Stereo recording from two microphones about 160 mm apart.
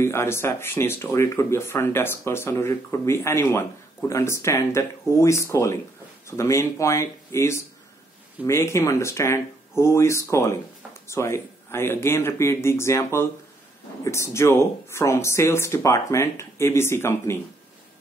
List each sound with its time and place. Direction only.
0.0 s speech: 15° left (ahead or behind)